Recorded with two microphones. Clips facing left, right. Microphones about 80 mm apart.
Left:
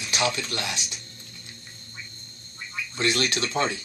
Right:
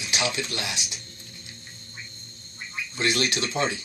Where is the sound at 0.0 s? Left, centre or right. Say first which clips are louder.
Left 2 dB; left.